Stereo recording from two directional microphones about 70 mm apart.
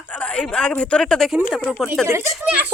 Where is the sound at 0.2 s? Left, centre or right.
Centre.